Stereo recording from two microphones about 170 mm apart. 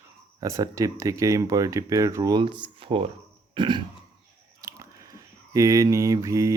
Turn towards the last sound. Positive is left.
turn(degrees=-20)  # may be behind; listen again after turning